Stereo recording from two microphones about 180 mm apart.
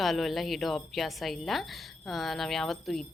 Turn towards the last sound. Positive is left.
turn(degrees=0)  # may be behind; listen again after turning